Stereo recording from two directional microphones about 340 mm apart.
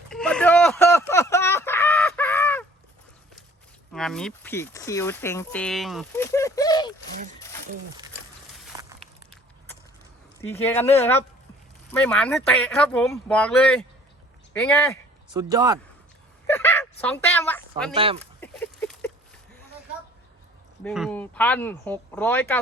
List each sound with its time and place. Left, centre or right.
0.1 s chicken: centre
3.9 s speech: centre
8.7 s a sound: centre
10.4 s speech: centre
15.3 s speech: centre
16.5 s a sound: centre
17.9 s speech: centre
18.2 s a sound: centre
20.8 s speech: centre